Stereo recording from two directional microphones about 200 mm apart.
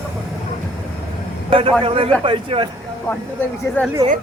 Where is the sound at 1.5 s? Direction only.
25° right (ahead or behind).